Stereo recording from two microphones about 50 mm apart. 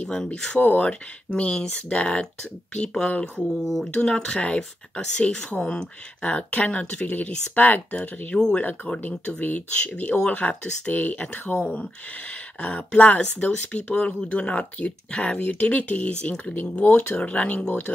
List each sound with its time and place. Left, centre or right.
0.0 s speech: centre
0.5 s speech: left
3.6 s speech: centre
3.9 s speech: centre
17.2 s speech: left
17.6 s speech: left